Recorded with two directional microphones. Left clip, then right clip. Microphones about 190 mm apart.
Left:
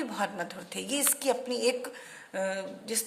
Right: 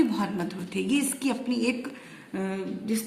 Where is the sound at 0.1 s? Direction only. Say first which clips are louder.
Right 2 dB; 50° left (ahead or behind).